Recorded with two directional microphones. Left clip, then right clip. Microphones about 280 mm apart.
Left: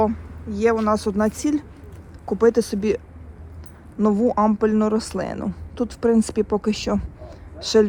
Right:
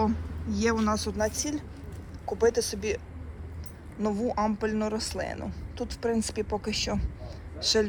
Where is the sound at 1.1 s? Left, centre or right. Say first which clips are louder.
Left 7 dB; left.